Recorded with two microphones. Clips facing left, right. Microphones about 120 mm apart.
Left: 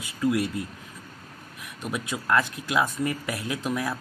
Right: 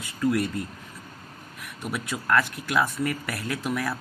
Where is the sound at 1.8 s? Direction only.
20° left (ahead or behind).